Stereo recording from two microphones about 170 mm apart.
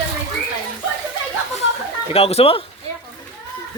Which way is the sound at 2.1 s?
35° left (ahead or behind).